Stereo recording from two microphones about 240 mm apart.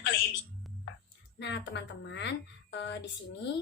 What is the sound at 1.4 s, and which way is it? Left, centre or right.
A woman's voice, left.